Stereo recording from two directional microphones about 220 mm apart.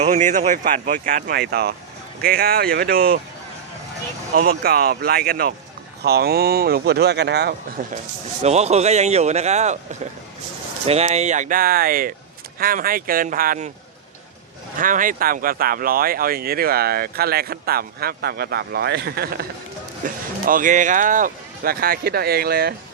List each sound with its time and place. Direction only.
0.0 s speech: 30° right (ahead or behind)
4.4 s speech: 40° right (ahead or behind)
7.8 s speech: 35° right (ahead or behind)
14.8 s speech: 35° right (ahead or behind)
20.5 s speech: 35° right (ahead or behind)